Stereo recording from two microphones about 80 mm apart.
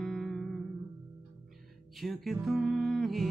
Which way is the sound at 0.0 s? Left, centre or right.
Centre.